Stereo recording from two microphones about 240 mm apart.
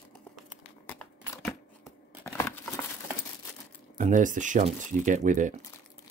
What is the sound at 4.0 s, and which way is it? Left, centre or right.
Speech, right.